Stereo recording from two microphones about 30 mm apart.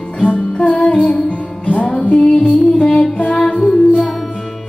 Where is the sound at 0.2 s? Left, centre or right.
Left.